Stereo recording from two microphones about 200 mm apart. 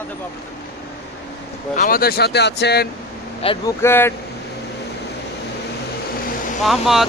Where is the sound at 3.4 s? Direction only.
25° left (ahead or behind).